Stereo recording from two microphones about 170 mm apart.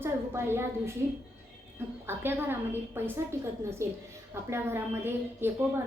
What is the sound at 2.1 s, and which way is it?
A woman's voice, 15° right (ahead or behind).